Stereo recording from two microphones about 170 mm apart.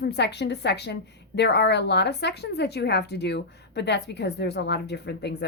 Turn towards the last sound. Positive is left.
turn(degrees=75)  # may be behind; listen again after turning